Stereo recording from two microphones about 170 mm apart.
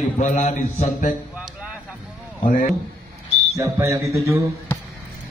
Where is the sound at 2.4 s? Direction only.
50° left (ahead or behind).